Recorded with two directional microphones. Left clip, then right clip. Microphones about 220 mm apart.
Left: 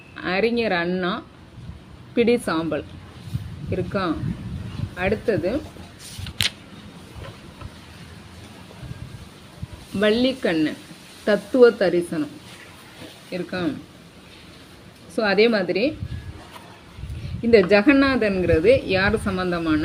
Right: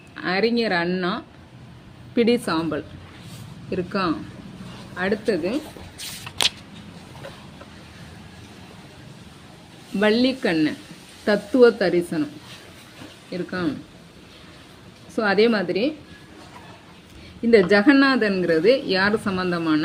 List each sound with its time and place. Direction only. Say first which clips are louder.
0.2 s a woman's voice: even; 15° right (ahead or behind)
4.9 s a woman's voice: left 1 dB; 15° right (ahead or behind)
10.0 s a woman's voice: even; 20° right (ahead or behind)
13.3 s a woman's voice: even; 15° right (ahead or behind)
15.1 s a woman's voice: left 1 dB; 15° right (ahead or behind)
17.5 s a woman's voice: even; 10° right (ahead or behind)